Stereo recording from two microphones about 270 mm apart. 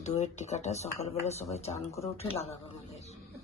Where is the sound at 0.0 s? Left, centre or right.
Left.